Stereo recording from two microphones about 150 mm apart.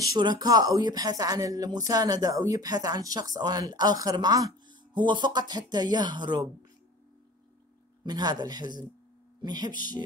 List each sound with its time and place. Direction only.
0.0 s speech: 25° right (ahead or behind)
8.0 s speech: 25° right (ahead or behind)